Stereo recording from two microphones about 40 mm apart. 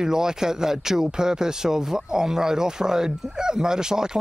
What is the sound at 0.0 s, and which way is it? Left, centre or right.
Speech, centre.